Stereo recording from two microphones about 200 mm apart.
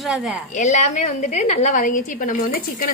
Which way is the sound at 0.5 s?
35° left (ahead or behind).